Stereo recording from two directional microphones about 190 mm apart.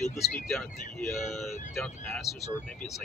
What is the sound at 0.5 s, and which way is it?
Speech, centre (ahead or behind).